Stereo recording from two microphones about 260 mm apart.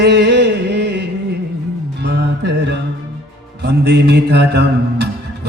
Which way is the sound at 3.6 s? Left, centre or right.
Right.